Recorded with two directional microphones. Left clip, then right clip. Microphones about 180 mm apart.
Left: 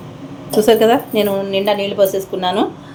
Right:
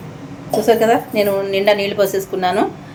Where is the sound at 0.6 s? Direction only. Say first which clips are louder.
Left 1 dB; 25° left (ahead or behind); by 2.7 s 10° left (ahead or behind).